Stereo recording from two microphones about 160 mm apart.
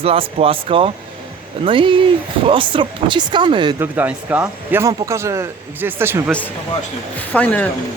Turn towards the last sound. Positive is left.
turn(degrees=10)  # may be behind; listen again after turning